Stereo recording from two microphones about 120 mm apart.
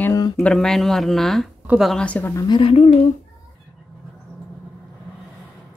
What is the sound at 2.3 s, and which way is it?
Speech, 40° left (ahead or behind).